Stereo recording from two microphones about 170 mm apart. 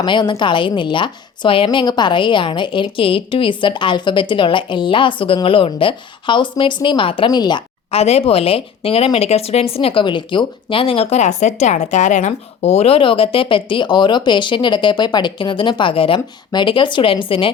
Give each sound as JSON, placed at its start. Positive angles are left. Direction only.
{"t": 0.0, "sound": "a woman's voice", "side_deg": 25}